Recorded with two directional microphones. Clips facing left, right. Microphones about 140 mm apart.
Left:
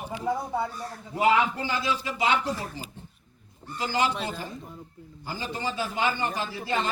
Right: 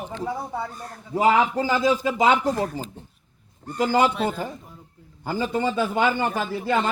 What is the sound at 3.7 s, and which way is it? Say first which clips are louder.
Speech: right 7 dB; 50° right (ahead or behind).